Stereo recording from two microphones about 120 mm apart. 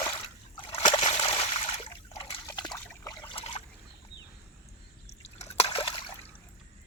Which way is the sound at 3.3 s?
60° left (ahead or behind).